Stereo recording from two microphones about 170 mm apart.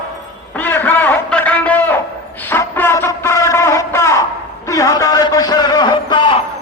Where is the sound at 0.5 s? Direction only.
10° left (ahead or behind); by 6.4 s 30° left (ahead or behind).